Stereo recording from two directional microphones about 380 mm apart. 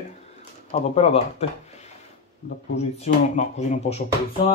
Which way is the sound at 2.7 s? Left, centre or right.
Centre.